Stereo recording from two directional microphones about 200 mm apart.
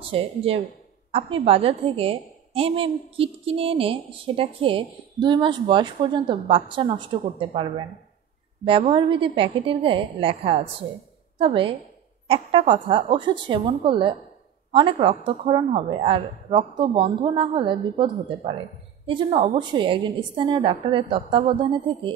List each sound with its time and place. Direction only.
0.1 s a woman's voice: 30° right (ahead or behind)